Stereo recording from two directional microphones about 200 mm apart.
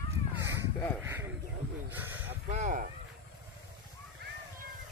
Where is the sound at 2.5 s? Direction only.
35° right (ahead or behind).